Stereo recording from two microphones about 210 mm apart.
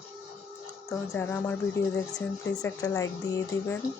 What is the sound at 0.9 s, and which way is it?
Speech, 5° left (ahead or behind).